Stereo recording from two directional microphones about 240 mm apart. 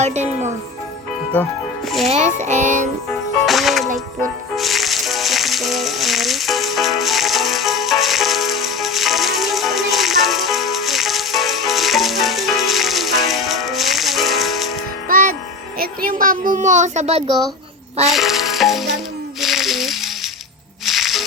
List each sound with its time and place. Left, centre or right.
0.0 s a woman's voice: right
2.0 s a woman's voice: right
3.1 s music: centre
15.0 s music: right
15.8 s a child's voice: right
18.1 s music: centre
19.4 s a sound: centre
20.8 s music: centre